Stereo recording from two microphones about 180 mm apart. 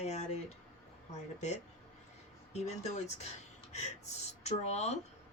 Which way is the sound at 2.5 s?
40° left (ahead or behind).